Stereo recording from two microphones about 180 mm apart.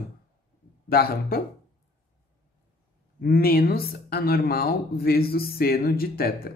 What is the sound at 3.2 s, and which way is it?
Speech, 55° left (ahead or behind).